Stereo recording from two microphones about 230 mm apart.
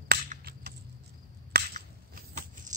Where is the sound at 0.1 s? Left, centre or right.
Right.